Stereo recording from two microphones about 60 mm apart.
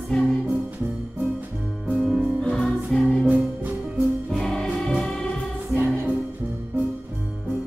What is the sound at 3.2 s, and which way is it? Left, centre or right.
Music, right.